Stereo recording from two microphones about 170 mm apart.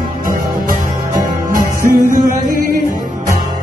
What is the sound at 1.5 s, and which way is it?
Music, 55° right (ahead or behind).